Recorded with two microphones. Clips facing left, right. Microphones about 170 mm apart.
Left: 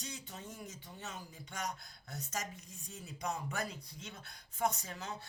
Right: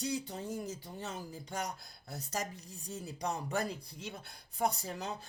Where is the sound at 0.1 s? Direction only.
35° right (ahead or behind).